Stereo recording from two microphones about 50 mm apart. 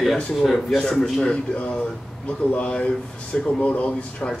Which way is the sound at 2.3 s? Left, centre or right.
Left.